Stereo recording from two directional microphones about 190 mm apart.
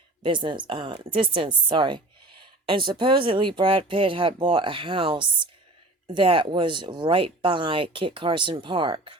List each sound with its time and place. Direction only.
0.2 s speech: 25° right (ahead or behind)